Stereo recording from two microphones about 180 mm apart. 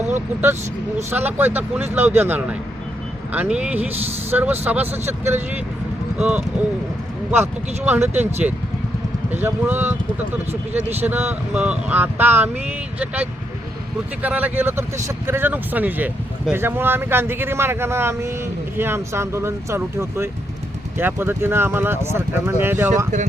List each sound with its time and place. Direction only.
1.1 s speech: 10° right (ahead or behind)
7.9 s speech: 10° right (ahead or behind)
10.5 s speech: 40° right (ahead or behind)
11.0 s speech: 10° right (ahead or behind)
14.2 s speech: 10° right (ahead or behind)